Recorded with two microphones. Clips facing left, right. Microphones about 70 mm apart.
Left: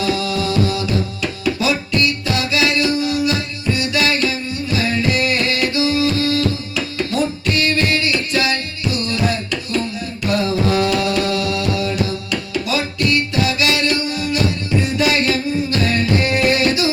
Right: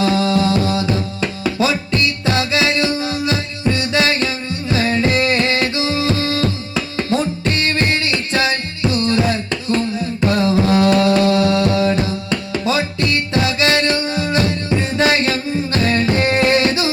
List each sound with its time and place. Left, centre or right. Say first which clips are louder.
0.0 s music: right 4 dB; right